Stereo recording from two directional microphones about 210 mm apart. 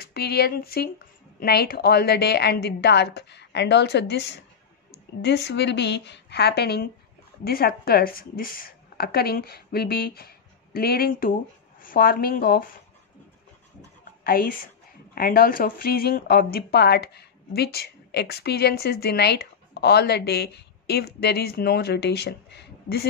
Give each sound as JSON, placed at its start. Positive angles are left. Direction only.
{"t": 0.0, "sound": "a woman's voice", "side_deg": 50}
{"t": 14.2, "sound": "speech", "side_deg": 45}